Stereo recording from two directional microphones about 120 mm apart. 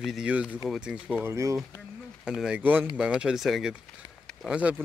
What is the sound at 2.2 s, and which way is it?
Speech, 5° right (ahead or behind).